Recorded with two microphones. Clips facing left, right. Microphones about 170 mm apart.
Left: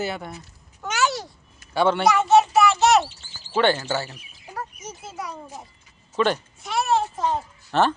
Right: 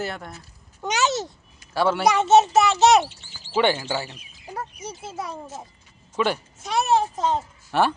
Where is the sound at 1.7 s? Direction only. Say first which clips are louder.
Left 1 dB; centre (ahead or behind).